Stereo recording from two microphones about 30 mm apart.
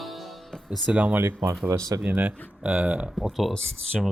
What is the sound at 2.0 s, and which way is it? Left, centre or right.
Speech, right.